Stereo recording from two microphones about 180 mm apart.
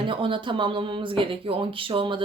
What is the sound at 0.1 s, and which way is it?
Speech, 30° right (ahead or behind).